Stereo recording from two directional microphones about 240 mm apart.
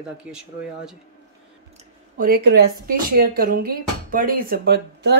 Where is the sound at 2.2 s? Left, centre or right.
Right.